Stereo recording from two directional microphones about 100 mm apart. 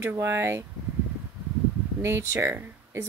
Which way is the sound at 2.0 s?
30° right (ahead or behind).